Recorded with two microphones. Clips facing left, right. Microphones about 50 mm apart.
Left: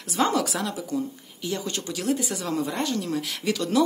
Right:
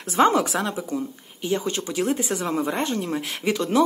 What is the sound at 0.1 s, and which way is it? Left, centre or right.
Speech, right.